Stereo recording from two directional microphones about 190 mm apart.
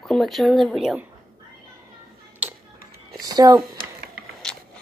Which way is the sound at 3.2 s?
20° right (ahead or behind).